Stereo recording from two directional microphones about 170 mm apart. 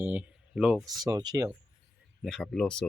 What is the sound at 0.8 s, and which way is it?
Speech, 20° right (ahead or behind).